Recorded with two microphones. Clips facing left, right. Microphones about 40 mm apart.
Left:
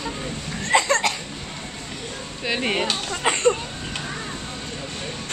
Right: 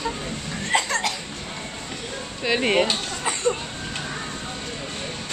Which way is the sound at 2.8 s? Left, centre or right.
Left.